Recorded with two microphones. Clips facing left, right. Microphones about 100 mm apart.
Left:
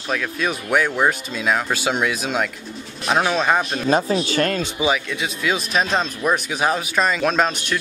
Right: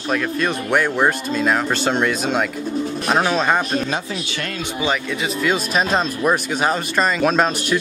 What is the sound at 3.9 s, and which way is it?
Speech, 40° left (ahead or behind).